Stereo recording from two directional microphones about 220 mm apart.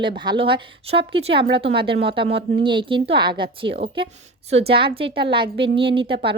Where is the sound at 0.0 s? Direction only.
20° right (ahead or behind).